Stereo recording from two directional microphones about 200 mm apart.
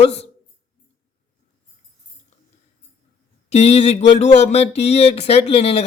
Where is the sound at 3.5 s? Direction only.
30° left (ahead or behind).